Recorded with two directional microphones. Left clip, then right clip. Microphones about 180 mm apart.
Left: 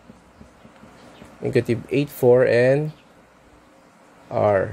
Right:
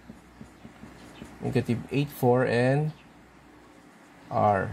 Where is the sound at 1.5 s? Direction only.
50° left (ahead or behind).